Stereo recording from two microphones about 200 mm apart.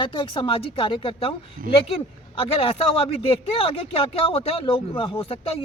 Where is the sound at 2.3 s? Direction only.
25° left (ahead or behind).